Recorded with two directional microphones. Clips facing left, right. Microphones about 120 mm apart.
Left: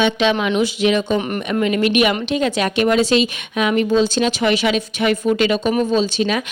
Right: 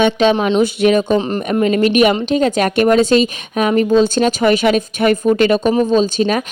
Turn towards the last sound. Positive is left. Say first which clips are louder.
# right 4 dB
turn(degrees=-45)  # may be behind; listen again after turning